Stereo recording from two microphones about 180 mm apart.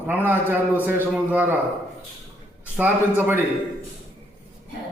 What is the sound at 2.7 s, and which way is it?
Speech, 10° right (ahead or behind).